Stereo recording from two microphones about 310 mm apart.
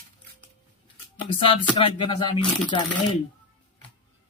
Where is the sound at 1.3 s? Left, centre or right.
Centre.